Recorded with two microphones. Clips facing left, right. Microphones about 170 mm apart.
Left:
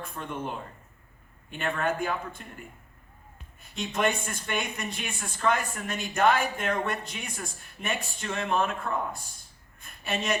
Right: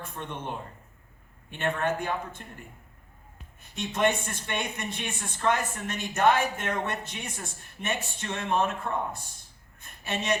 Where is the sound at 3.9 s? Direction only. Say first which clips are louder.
Right 2 dB; 25° right (ahead or behind).